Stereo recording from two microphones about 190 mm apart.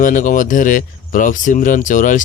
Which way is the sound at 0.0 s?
45° left (ahead or behind).